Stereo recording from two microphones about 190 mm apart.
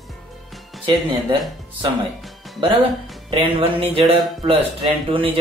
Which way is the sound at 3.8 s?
30° right (ahead or behind).